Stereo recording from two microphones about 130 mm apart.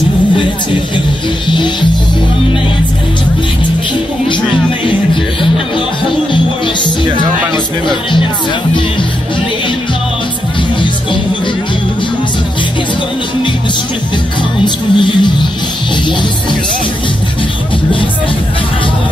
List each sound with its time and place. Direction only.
1.5 s music: 35° left (ahead or behind)
7.5 s music: 35° left (ahead or behind)
14.6 s music: 35° left (ahead or behind)